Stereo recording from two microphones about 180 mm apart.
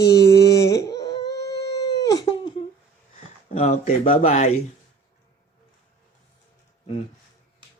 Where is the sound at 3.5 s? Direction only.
35° left (ahead or behind).